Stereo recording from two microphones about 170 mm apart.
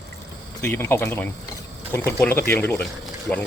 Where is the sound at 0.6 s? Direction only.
15° left (ahead or behind).